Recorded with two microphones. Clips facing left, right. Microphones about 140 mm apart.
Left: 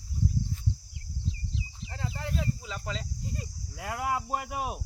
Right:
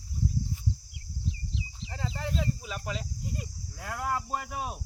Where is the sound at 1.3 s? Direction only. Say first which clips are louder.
Even; 20° right (ahead or behind).